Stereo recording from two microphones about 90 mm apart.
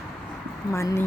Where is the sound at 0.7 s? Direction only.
30° left (ahead or behind).